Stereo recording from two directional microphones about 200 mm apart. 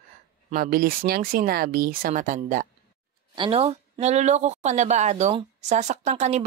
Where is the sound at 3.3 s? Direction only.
30° right (ahead or behind).